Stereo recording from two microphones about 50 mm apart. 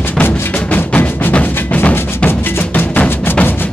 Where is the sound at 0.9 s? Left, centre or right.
Left.